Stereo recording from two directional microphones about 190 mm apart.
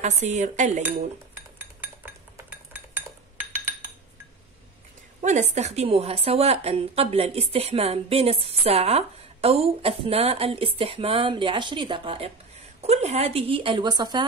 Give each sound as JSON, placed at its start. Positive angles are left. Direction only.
{"t": 0.0, "sound": "a woman's voice", "side_deg": -40}
{"t": 1.8, "sound": "dishes", "side_deg": -10}
{"t": 5.2, "sound": "a woman's voice", "side_deg": -40}